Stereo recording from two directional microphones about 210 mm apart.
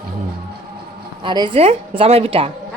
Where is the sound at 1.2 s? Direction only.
20° right (ahead or behind).